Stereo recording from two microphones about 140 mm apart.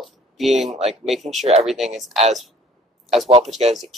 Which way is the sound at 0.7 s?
50° right (ahead or behind).